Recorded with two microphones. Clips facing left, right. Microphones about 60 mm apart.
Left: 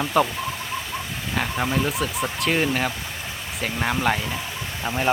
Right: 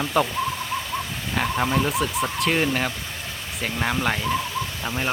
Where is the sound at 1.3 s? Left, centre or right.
Centre.